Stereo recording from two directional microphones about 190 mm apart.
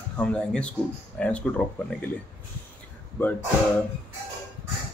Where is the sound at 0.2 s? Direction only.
5° left (ahead or behind).